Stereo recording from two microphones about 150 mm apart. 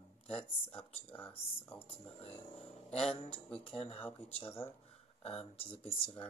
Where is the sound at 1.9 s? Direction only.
45° left (ahead or behind).